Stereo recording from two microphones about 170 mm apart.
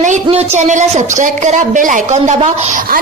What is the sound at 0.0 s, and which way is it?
A woman's voice, 40° right (ahead or behind).